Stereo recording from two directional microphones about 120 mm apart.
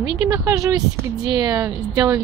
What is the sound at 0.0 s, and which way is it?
A woman's voice, 30° right (ahead or behind).